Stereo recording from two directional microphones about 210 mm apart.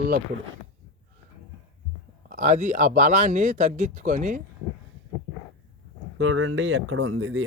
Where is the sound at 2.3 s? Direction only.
35° right (ahead or behind).